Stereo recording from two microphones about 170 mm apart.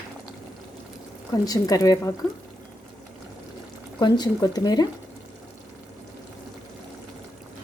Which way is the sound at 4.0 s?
25° left (ahead or behind).